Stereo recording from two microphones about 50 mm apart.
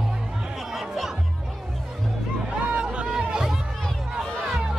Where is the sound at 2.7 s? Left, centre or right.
Right.